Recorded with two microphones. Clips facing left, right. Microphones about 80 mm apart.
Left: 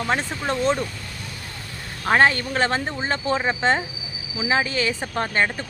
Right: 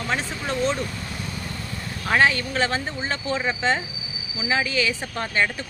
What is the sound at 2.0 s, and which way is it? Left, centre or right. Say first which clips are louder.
Speech: left 2 dB; left.